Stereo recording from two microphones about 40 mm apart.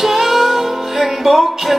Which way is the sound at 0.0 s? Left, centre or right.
Centre.